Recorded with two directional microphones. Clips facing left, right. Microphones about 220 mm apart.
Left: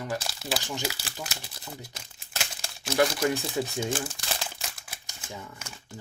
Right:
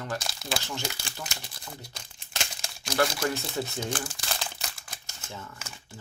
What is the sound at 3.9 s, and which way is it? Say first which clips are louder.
Crumpling: left 2 dB; centre (ahead or behind).